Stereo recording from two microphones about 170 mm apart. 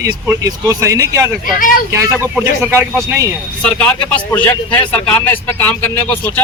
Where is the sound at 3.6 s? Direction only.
10° left (ahead or behind).